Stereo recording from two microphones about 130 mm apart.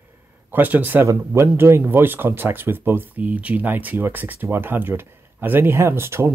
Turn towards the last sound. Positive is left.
turn(degrees=-20)  # may be behind; listen again after turning